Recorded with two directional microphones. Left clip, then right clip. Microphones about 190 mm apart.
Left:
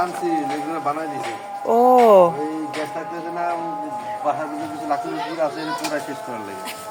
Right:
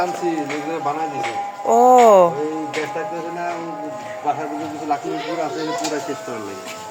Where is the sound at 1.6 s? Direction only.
15° left (ahead or behind).